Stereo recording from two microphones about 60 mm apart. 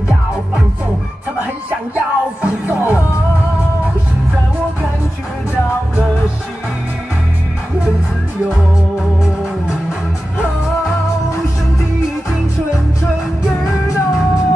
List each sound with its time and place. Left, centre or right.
1.7 s music: right
13.8 s music: left